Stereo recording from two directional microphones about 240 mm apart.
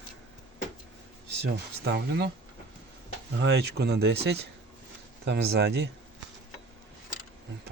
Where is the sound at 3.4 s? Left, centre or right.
Right.